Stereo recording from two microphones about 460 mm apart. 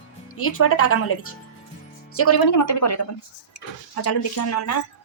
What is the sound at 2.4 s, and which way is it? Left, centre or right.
Speech, left.